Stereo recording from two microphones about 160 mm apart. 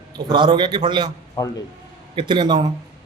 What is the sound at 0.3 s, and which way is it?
Speech, 30° right (ahead or behind).